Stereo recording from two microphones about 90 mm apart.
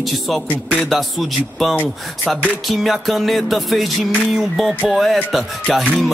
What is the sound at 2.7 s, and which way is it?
Music, centre (ahead or behind).